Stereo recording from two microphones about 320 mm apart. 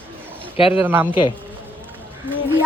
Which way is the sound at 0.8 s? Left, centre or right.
Centre.